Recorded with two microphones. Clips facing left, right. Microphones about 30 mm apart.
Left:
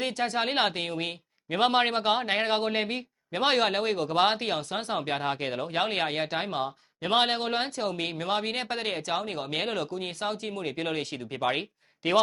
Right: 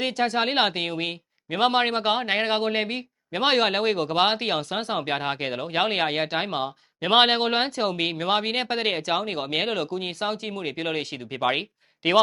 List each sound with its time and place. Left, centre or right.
0.1 s speech: centre
0.3 s speech: centre
9.0 s speech: centre
9.2 s speech: right